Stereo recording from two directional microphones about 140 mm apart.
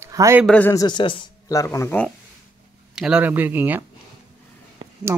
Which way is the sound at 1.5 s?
25° left (ahead or behind).